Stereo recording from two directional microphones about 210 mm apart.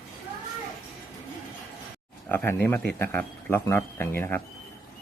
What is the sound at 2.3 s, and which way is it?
Speech, 10° left (ahead or behind).